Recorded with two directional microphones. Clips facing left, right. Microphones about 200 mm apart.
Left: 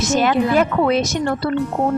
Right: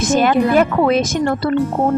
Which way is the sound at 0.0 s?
50° right (ahead or behind).